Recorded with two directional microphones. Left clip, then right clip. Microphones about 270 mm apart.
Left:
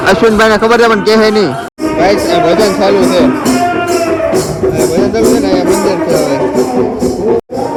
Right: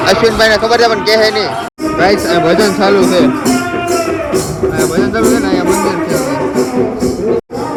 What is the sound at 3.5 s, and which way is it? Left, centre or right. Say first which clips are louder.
Music: left 3 dB; centre.